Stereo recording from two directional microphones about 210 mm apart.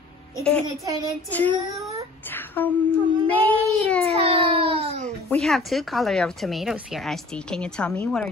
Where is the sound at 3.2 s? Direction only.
10° left (ahead or behind).